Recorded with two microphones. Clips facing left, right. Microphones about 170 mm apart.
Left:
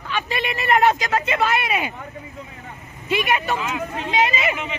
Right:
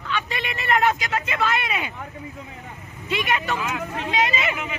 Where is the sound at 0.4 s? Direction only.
20° left (ahead or behind).